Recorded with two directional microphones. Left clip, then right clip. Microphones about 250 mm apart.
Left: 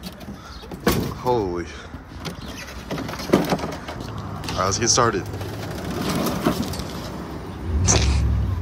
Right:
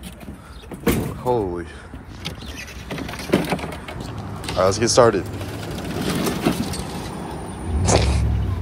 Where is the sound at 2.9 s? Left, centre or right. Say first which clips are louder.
Left 1 dB; left.